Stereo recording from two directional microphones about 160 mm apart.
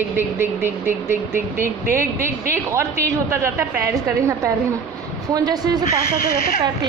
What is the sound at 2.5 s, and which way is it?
A woman's voice, 15° right (ahead or behind).